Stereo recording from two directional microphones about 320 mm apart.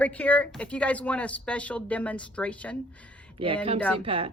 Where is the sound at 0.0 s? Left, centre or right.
Centre.